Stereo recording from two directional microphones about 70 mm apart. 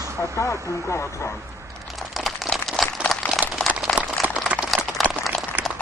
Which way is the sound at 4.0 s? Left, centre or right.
Centre.